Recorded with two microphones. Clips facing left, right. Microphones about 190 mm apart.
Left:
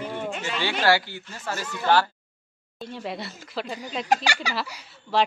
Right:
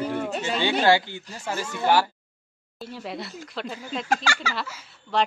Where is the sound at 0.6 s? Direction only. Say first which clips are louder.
Right 2 dB; 20° right (ahead or behind).